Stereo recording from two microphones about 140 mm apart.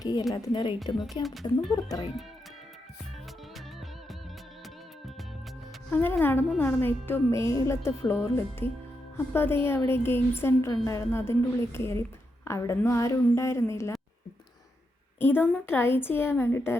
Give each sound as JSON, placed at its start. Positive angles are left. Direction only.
{"t": 0.0, "sound": "a sound", "side_deg": 25}
{"t": 0.3, "sound": "speech", "side_deg": 30}
{"t": 1.2, "sound": "speech", "side_deg": 0}
{"t": 1.7, "sound": "a woman's voice", "side_deg": 30}
{"t": 5.9, "sound": "a woman's voice", "side_deg": 15}
{"t": 15.2, "sound": "a woman's voice", "side_deg": 15}